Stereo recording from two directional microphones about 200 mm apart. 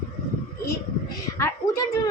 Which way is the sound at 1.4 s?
15° left (ahead or behind).